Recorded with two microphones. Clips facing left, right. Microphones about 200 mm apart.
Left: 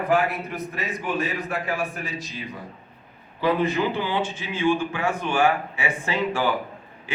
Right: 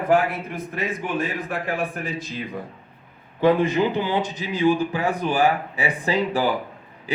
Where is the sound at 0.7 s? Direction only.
55° right (ahead or behind).